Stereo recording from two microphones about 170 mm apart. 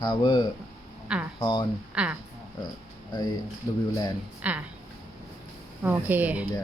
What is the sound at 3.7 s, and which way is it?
Speech, 20° left (ahead or behind).